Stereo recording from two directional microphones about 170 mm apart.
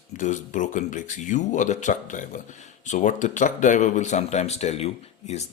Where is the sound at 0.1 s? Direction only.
45° left (ahead or behind).